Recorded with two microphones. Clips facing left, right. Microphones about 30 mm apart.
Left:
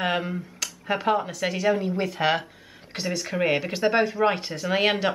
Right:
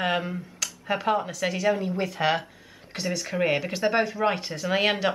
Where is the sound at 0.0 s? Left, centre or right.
Centre.